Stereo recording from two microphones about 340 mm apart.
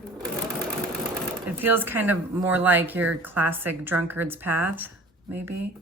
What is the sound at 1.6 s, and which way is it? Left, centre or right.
Speech, centre.